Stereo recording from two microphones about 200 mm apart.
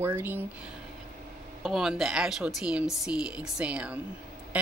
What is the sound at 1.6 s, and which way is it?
A woman's voice, centre (ahead or behind).